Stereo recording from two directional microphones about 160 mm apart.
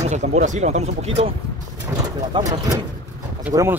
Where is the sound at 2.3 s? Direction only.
25° right (ahead or behind).